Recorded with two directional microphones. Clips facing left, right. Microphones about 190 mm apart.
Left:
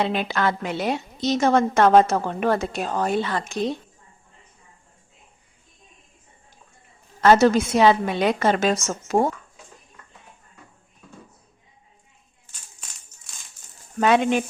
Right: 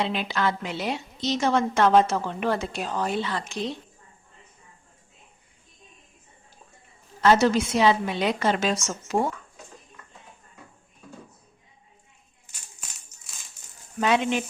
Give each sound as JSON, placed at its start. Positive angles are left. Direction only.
{"t": 0.0, "sound": "a woman's voice", "side_deg": 50}
{"t": 7.2, "sound": "a woman's voice", "side_deg": 50}
{"t": 14.0, "sound": "a woman's voice", "side_deg": 50}